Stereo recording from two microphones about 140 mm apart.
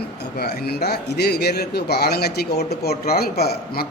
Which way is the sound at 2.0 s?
90° left.